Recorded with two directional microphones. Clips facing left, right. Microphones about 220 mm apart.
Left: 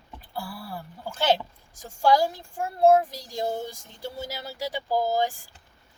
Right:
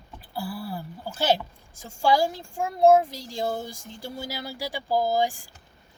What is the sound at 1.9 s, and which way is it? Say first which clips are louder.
Speech: left 1 dB; 10° right (ahead or behind).